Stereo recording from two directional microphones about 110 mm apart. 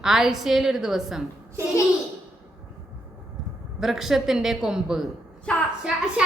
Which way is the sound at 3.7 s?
5° right (ahead or behind).